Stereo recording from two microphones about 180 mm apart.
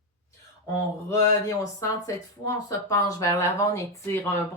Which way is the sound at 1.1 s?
20° left (ahead or behind).